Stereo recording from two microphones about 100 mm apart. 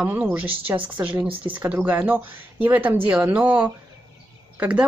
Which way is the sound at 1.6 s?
15° right (ahead or behind).